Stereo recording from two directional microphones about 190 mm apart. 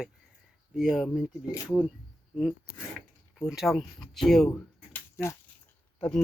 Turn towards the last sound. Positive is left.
turn(degrees=5)  # may be behind; listen again after turning